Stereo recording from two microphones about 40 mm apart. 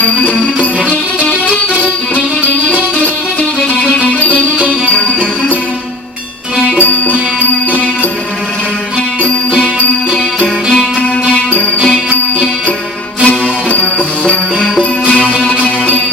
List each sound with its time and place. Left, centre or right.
0.0 s music: left
2.6 s music: left
6.7 s music: left
11.3 s music: left
13.2 s music: left